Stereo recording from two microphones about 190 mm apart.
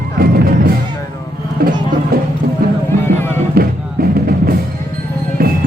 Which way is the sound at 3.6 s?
55° right (ahead or behind).